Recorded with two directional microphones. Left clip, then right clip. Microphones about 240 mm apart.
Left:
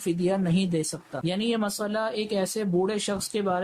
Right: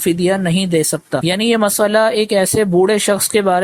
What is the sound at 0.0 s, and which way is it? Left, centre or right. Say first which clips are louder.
A man's voice: right 11 dB; right.